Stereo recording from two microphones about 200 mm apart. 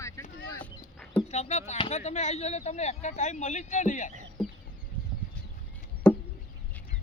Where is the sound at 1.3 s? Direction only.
35° left (ahead or behind).